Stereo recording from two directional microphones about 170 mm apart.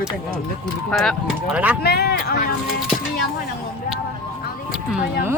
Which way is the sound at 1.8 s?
70° left (ahead or behind).